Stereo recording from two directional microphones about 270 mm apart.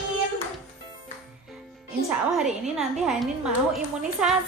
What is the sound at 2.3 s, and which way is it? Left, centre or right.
Child singing, centre.